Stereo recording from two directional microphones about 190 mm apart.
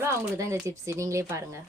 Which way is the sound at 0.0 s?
15° right (ahead or behind).